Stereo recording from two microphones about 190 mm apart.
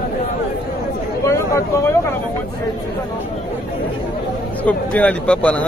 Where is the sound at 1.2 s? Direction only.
15° left (ahead or behind).